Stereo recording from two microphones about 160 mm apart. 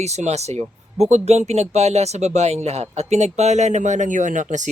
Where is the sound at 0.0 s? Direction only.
45° right (ahead or behind).